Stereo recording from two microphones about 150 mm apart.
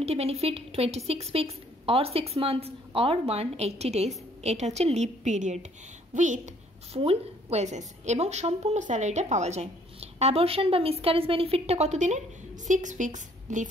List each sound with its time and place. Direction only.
0.0 s a woman's voice: 45° right (ahead or behind)
7.0 s a woman's voice: 45° right (ahead or behind)